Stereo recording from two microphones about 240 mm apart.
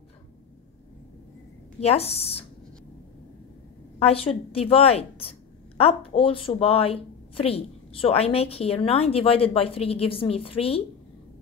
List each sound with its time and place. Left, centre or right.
1.8 s a woman's voice: left
4.0 s a woman's voice: left